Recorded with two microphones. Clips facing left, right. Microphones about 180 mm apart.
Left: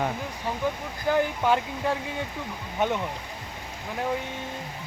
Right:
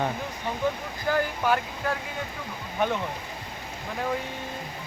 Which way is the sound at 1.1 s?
20° left (ahead or behind).